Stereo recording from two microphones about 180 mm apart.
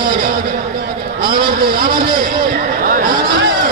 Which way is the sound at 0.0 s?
55° right (ahead or behind).